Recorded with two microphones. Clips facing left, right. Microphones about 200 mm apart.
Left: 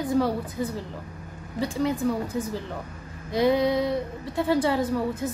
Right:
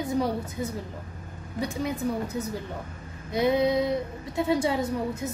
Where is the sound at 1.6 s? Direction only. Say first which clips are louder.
Left 4 dB; 20° right (ahead or behind).